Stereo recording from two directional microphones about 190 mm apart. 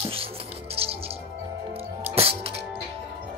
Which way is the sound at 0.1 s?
30° right (ahead or behind).